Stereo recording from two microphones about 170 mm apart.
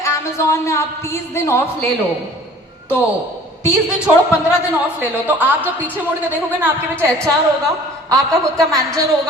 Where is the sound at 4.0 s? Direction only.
5° right (ahead or behind).